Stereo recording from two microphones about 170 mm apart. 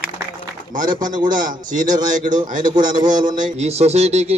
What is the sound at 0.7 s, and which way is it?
A man's voice, 50° right (ahead or behind).